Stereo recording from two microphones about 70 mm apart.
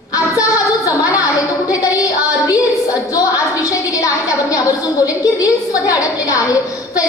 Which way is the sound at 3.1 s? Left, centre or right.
Left.